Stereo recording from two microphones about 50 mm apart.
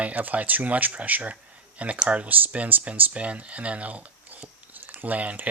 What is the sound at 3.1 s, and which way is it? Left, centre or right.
Speech, right.